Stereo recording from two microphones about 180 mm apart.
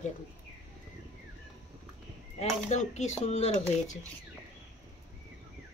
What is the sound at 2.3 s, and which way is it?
Speech, 40° left (ahead or behind).